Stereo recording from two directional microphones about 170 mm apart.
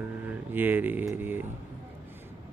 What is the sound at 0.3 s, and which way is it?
Speech, 10° right (ahead or behind).